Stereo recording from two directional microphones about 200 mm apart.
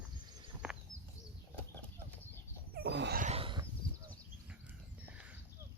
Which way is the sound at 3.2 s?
30° right (ahead or behind).